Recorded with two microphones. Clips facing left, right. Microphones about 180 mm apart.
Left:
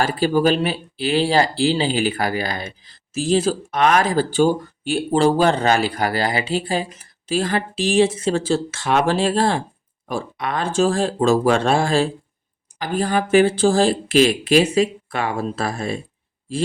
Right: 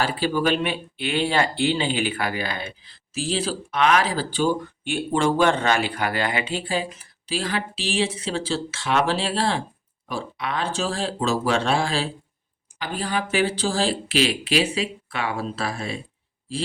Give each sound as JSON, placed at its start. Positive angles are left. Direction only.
{"t": 0.0, "sound": "speech", "side_deg": 45}